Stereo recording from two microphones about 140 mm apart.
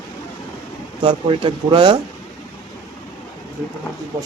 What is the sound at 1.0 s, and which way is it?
Speech, 35° right (ahead or behind).